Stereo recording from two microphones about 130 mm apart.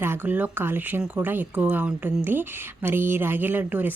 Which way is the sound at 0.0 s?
15° right (ahead or behind).